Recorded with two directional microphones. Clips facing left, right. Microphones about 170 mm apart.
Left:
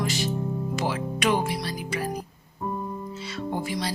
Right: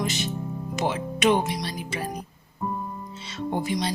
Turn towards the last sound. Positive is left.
turn(degrees=-20)  # may be behind; listen again after turning